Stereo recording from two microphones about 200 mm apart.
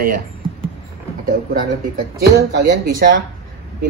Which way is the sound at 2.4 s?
50° right (ahead or behind).